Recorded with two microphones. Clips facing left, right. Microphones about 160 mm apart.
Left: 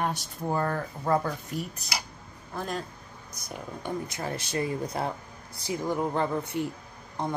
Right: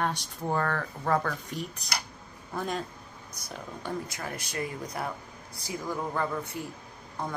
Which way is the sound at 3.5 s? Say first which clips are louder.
Left 2 dB; 20° left (ahead or behind).